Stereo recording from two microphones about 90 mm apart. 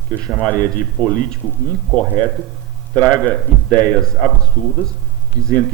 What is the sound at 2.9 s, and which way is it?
A man's voice, 15° left (ahead or behind).